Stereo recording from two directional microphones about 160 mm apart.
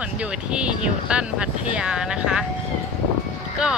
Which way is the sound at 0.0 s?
5° right (ahead or behind).